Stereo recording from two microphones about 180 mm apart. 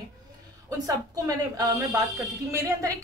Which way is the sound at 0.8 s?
20° right (ahead or behind).